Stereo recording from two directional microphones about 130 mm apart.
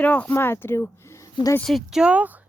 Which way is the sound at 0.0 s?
10° left (ahead or behind).